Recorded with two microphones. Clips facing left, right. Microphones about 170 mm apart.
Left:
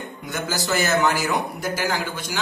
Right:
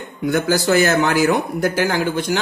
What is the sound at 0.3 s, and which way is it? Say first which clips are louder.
Speech: right 9 dB; 55° right (ahead or behind).